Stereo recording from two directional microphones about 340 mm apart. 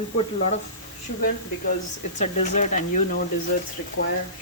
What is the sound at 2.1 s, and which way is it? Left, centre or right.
Speech, left.